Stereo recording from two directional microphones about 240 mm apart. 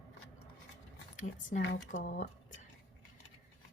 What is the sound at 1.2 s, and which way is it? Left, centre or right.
Speech, left.